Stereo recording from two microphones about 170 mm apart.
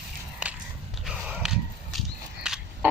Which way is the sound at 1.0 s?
Centre (ahead or behind).